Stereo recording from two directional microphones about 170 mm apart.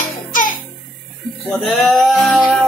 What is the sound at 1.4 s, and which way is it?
Music, centre (ahead or behind).